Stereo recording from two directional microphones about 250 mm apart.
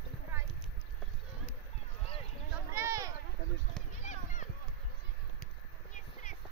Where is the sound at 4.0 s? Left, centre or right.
Left.